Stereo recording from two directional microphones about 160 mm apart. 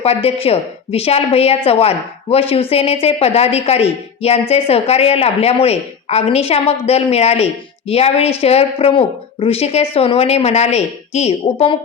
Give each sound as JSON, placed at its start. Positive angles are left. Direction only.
{"t": 0.0, "sound": "a woman's voice", "side_deg": 40}